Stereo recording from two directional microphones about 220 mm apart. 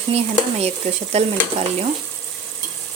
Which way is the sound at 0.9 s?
30° right (ahead or behind).